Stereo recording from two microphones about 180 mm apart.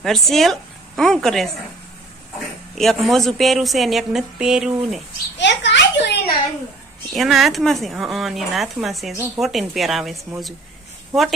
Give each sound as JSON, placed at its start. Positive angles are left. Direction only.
{"t": 0.0, "sound": "a woman's voice", "side_deg": 0}
{"t": 2.7, "sound": "a woman's voice", "side_deg": 0}
{"t": 5.4, "sound": "a sound", "side_deg": 80}
{"t": 7.1, "sound": "a woman's voice", "side_deg": 0}